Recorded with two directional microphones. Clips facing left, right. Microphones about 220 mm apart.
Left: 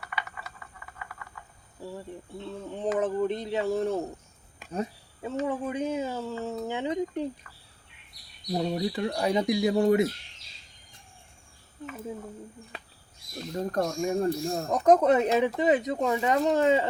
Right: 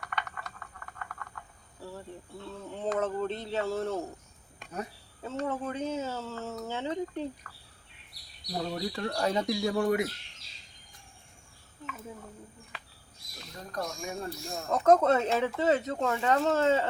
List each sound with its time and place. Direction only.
0.0 s typing: 5° left (ahead or behind)
1.8 s speech: 15° left (ahead or behind)
4.6 s a sound: centre (ahead or behind)
5.5 s speech: 15° left (ahead or behind)
8.5 s speech: 20° left (ahead or behind)
13.5 s speech: 45° left (ahead or behind)
14.8 s speech: 15° left (ahead or behind)